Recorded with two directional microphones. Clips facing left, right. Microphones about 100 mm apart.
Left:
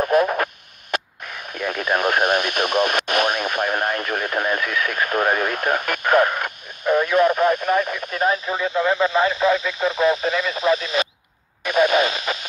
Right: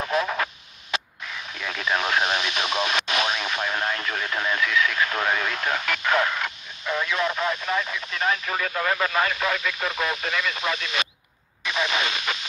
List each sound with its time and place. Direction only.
0.1 s radio: 50° left (ahead or behind)
0.9 s speech: 50° left (ahead or behind)
8.5 s speech: 20° left (ahead or behind); by 11.1 s 35° left (ahead or behind)
11.6 s a sound: 50° left (ahead or behind)